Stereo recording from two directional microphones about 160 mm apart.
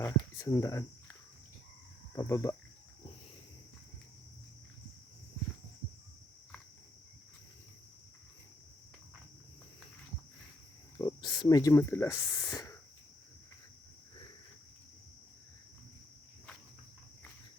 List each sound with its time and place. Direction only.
0.0 s cricket: 20° left (ahead or behind)
2.1 s speech: 20° left (ahead or behind)
10.9 s speech: 25° left (ahead or behind)
12.4 s a sound: 25° left (ahead or behind)